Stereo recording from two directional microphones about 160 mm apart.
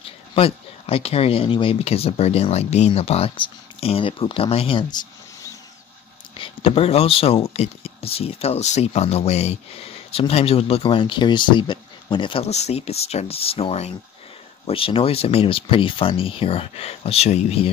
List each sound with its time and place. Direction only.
0.0 s speech: 35° left (ahead or behind)
6.3 s speech: 35° left (ahead or behind)